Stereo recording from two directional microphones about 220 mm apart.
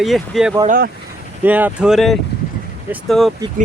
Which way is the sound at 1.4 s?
10° right (ahead or behind).